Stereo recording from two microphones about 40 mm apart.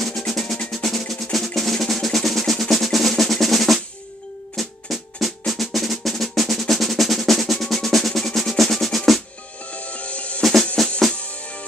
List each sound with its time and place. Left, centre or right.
0.3 s drum: centre
9.7 s music: left
10.4 s music: centre
11.1 s music: left